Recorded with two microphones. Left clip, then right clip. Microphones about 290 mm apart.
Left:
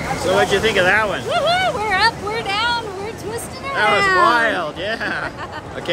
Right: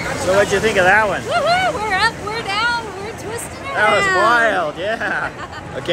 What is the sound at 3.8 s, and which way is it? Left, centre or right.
Speech, centre.